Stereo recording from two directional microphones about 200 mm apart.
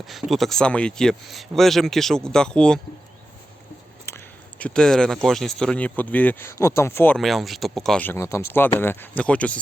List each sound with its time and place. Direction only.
0.0 s speech: centre (ahead or behind)
4.0 s speech: 10° left (ahead or behind)